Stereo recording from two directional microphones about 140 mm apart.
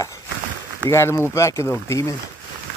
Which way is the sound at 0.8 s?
20° left (ahead or behind).